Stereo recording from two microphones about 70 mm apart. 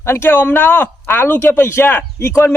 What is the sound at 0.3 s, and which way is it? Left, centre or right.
A man's voice, left.